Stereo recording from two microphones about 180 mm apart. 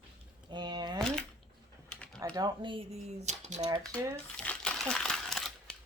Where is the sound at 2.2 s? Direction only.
20° right (ahead or behind); by 3.7 s 40° right (ahead or behind).